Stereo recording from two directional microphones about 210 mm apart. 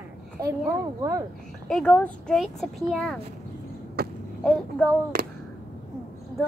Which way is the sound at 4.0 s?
50° right (ahead or behind).